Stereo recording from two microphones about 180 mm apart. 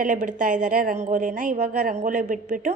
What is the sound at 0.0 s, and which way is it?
A woman's voice, 45° right (ahead or behind).